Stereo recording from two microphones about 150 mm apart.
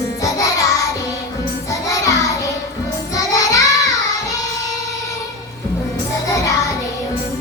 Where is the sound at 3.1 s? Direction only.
25° left (ahead or behind).